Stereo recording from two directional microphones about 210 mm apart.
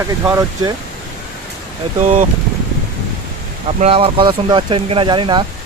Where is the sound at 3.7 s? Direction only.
25° right (ahead or behind).